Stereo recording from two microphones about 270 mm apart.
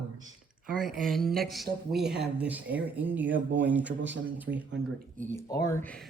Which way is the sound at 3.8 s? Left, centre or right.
Right.